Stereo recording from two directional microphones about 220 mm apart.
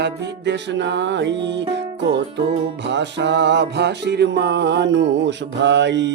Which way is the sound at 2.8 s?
50° right (ahead or behind).